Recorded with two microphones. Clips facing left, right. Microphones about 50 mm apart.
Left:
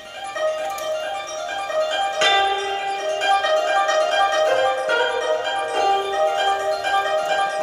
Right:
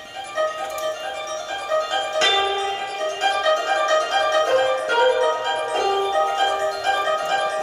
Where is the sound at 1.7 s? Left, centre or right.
Centre.